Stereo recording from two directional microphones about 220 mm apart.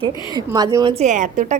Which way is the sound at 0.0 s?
20° right (ahead or behind).